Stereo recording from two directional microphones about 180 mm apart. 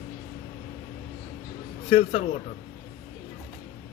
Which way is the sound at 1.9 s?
35° left (ahead or behind).